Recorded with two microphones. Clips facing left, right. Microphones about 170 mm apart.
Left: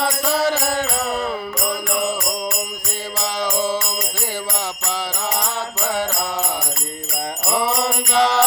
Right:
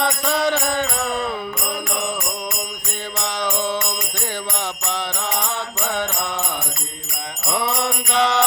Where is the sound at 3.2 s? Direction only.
5° left (ahead or behind).